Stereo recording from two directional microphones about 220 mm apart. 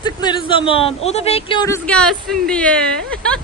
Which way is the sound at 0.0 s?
20° left (ahead or behind).